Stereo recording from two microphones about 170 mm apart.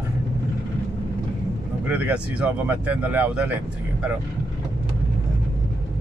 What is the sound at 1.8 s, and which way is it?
Speech, 10° right (ahead or behind).